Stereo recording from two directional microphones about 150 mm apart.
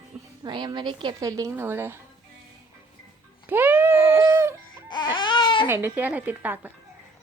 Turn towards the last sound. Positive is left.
turn(degrees=-10)  # may be behind; listen again after turning